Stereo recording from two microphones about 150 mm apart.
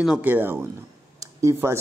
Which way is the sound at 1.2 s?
20° right (ahead or behind).